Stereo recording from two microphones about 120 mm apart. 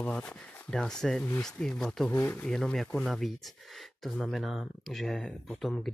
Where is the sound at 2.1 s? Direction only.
15° left (ahead or behind).